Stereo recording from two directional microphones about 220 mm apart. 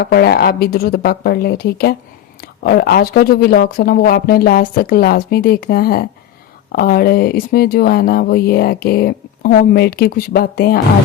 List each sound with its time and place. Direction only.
0.0 s speech: 45° left (ahead or behind)